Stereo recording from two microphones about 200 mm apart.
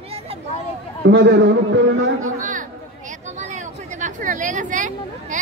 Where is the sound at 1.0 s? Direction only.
60° right (ahead or behind).